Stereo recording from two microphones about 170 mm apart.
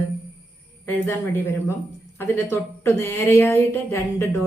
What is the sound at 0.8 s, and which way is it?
A woman's voice, 15° left (ahead or behind).